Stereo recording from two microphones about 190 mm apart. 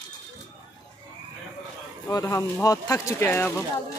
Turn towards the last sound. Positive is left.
turn(degrees=10)  # may be behind; listen again after turning